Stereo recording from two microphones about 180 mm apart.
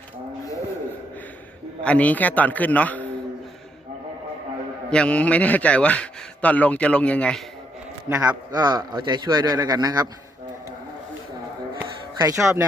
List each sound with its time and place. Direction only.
1.8 s a man's voice: 5° left (ahead or behind)
4.9 s a man's voice: 5° left (ahead or behind)
8.1 s a man's voice: 20° right (ahead or behind)
11.8 s a sound: 15° right (ahead or behind)